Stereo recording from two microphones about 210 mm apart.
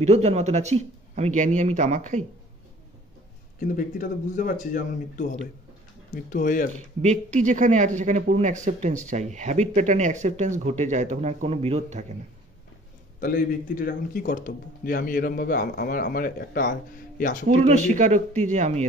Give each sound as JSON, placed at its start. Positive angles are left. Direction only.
{"t": 0.0, "sound": "speech", "side_deg": -30}
{"t": 3.5, "sound": "a man's voice", "side_deg": 40}
{"t": 7.0, "sound": "speech", "side_deg": -35}
{"t": 13.2, "sound": "a man's voice", "side_deg": 40}
{"t": 17.5, "sound": "speech", "side_deg": -35}